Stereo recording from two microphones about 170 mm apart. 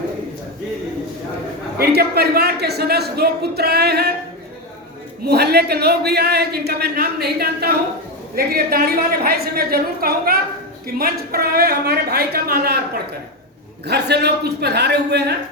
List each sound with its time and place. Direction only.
1.8 s a man's voice: 70° right (ahead or behind)
5.2 s a man's voice: 70° right (ahead or behind)
13.8 s a man's voice: 75° right (ahead or behind)